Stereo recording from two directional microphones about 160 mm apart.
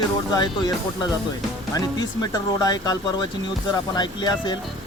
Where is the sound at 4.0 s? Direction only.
25° left (ahead or behind).